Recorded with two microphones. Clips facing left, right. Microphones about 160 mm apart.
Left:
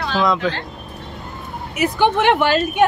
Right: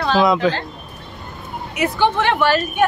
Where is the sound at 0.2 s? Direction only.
5° right (ahead or behind).